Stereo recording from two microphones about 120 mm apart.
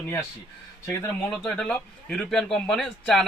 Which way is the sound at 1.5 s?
10° left (ahead or behind).